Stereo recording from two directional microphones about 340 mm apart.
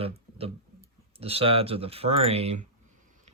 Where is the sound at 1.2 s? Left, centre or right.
Centre.